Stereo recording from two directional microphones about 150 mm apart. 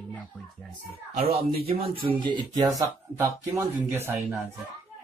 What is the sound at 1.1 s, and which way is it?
Speech, 45° right (ahead or behind).